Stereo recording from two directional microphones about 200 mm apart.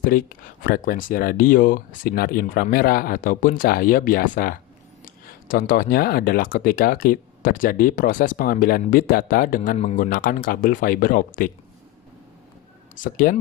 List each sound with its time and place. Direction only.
0.0 s speech: 45° left (ahead or behind)
13.0 s speech: 45° left (ahead or behind)